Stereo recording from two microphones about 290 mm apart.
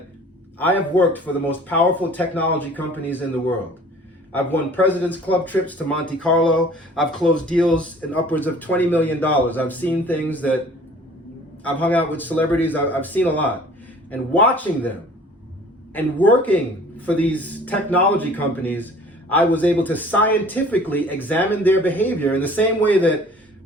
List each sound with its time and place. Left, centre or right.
0.9 s speech: centre
11.6 s speech: centre